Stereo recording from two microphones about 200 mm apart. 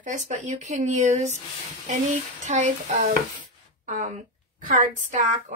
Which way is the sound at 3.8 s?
40° right (ahead or behind).